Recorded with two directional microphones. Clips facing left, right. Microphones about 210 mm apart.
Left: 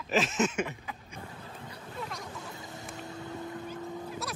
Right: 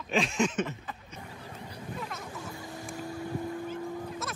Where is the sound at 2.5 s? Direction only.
20° left (ahead or behind).